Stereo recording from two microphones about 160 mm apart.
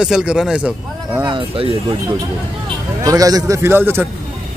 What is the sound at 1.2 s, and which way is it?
Speech, 35° right (ahead or behind).